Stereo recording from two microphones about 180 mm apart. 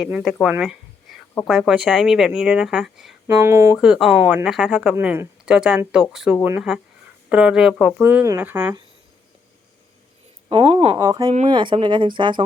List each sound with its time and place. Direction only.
0.0 s speech: centre (ahead or behind)
3.4 s speech: 15° right (ahead or behind)
3.8 s speech: 5° right (ahead or behind)
10.5 s speech: 30° right (ahead or behind)
10.9 s speech: 20° right (ahead or behind)